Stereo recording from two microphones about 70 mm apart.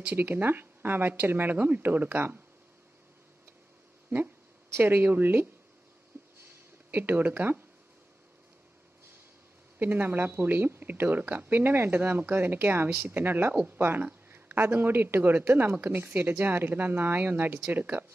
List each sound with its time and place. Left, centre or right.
0.0 s speech: right
4.7 s speech: right
6.1 s a sound: right
6.9 s speech: right
9.8 s speech: right